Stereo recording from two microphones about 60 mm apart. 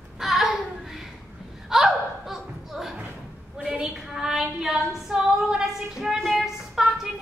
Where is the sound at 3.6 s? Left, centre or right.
Centre.